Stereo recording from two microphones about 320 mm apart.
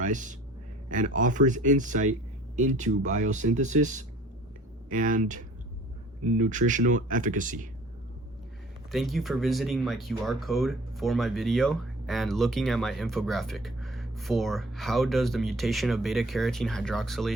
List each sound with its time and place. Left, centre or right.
0.0 s a man's voice: right
8.9 s speech: centre